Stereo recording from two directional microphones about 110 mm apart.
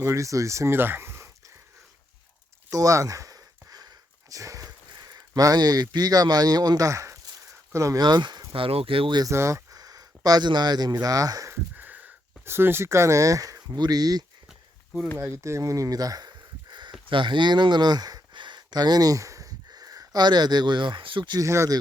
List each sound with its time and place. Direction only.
0.0 s speech: 25° right (ahead or behind)
2.6 s a sound: 30° right (ahead or behind)
8.0 s speech: 40° right (ahead or behind)
8.5 s speech: 55° right (ahead or behind)
9.2 s speech: 25° right (ahead or behind)
11.5 s speech: 15° right (ahead or behind); by 14.3 s 35° right (ahead or behind)
15.2 s speech: 25° right (ahead or behind); by 21.3 s 50° right (ahead or behind)
21.3 s speech: 25° right (ahead or behind)